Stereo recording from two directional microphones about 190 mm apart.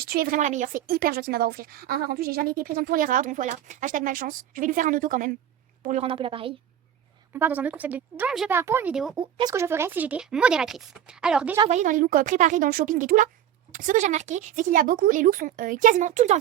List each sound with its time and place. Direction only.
0.0 s a woman's voice: 55° right (ahead or behind)
5.8 s a woman's voice: 35° right (ahead or behind)
7.3 s speech: 10° right (ahead or behind)
9.1 s speech: 20° right (ahead or behind); by 11.5 s 5° right (ahead or behind)
11.7 s a woman's voice: 40° right (ahead or behind)